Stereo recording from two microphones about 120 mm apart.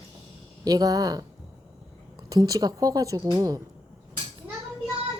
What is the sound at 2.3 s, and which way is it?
A woman's voice, 30° right (ahead or behind).